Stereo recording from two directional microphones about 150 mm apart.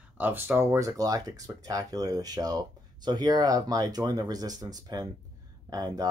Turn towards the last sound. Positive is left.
turn(degrees=-25)  # may be behind; listen again after turning